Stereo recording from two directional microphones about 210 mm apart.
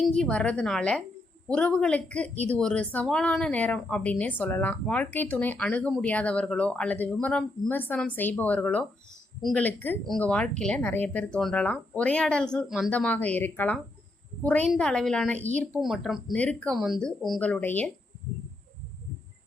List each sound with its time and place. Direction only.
0.2 s a woman's voice: 5° left (ahead or behind)